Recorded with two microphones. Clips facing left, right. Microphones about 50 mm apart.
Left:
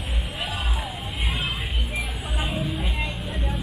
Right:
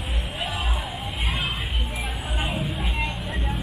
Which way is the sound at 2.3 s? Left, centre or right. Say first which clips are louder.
Left 1 dB; centre.